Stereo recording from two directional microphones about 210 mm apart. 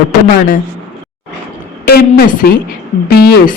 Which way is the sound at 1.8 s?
45° left (ahead or behind).